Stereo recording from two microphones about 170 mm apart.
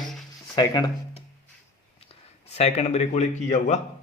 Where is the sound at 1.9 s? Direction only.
35° left (ahead or behind).